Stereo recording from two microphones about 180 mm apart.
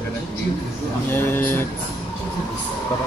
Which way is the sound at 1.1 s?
10° left (ahead or behind).